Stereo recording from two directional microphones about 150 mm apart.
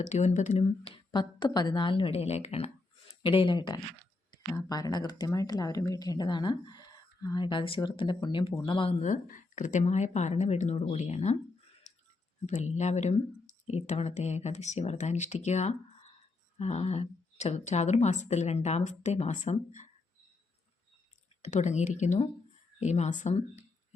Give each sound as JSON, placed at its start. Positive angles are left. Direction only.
{"t": 0.0, "sound": "a woman's voice", "side_deg": 50}
{"t": 0.9, "sound": "a woman's voice", "side_deg": 30}
{"t": 3.2, "sound": "a woman's voice", "side_deg": 35}
{"t": 11.9, "sound": "a sound", "side_deg": 50}
{"t": 12.5, "sound": "a woman's voice", "side_deg": 50}
{"t": 21.4, "sound": "a woman's voice", "side_deg": 50}